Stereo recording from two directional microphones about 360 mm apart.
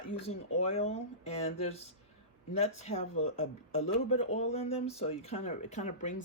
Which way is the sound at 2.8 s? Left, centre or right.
Centre.